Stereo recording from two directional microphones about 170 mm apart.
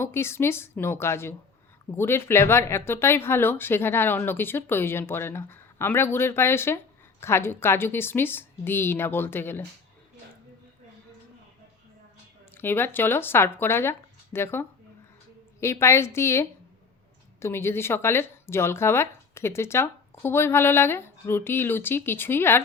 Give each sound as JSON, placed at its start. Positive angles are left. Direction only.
{"t": 0.0, "sound": "speech", "side_deg": 15}
{"t": 12.5, "sound": "speech", "side_deg": 10}